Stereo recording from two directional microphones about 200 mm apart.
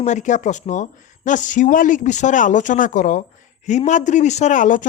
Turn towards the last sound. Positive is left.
turn(degrees=40)  # may be behind; listen again after turning